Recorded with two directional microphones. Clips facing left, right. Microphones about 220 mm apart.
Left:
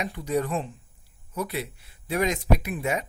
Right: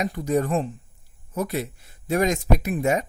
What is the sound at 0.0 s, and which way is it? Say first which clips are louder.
Speech: right 4 dB; 45° right (ahead or behind).